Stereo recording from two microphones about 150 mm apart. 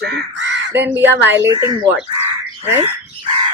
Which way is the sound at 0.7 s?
15° right (ahead or behind).